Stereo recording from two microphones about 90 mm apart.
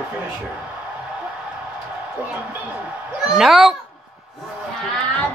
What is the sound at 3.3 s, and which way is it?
Speech, 5° right (ahead or behind).